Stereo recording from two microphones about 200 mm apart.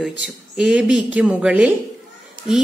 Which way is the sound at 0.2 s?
5° right (ahead or behind).